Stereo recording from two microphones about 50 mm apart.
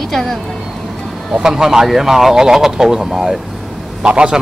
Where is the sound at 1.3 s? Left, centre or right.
Centre.